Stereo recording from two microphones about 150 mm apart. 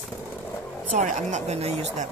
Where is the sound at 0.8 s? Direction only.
50° right (ahead or behind).